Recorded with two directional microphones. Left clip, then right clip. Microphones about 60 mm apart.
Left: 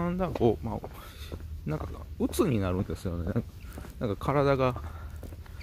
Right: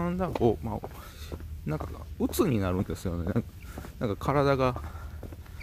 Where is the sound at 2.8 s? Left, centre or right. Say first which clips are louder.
Right 1 dB; centre.